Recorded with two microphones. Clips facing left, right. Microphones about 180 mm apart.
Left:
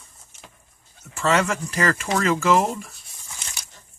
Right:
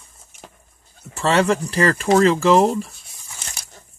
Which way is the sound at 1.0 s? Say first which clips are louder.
Right 4 dB; 35° right (ahead or behind).